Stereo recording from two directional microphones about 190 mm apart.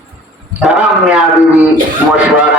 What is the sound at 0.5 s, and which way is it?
A man's voice, 5° right (ahead or behind).